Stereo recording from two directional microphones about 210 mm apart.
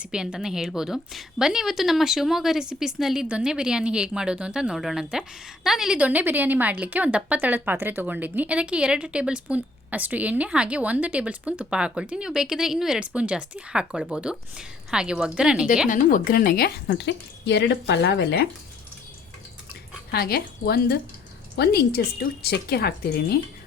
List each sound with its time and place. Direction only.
0.0 s a woman's voice: 5° right (ahead or behind)
15.9 s a woman's voice: 40° left (ahead or behind)
20.1 s a woman's voice: 50° left (ahead or behind)